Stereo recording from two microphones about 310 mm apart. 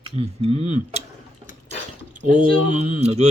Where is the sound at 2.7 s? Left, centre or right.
Right.